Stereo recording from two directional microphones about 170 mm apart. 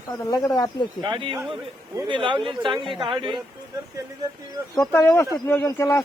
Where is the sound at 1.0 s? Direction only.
30° right (ahead or behind).